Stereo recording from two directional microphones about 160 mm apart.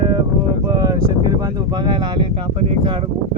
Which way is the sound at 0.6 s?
25° right (ahead or behind).